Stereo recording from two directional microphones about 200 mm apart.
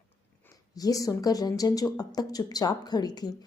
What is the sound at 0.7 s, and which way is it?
Speech, 15° left (ahead or behind).